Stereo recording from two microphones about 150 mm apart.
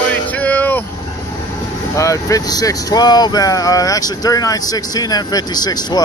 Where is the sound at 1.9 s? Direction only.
20° left (ahead or behind).